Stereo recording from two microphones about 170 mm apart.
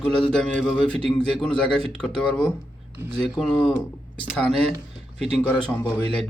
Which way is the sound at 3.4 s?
5° left (ahead or behind).